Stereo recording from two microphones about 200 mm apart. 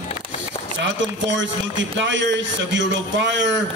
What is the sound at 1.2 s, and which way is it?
A man's voice, 65° right (ahead or behind).